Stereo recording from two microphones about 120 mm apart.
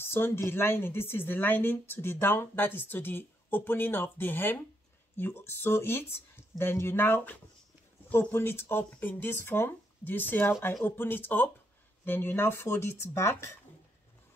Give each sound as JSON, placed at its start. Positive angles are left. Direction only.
{"t": 0.0, "sound": "speech", "side_deg": 20}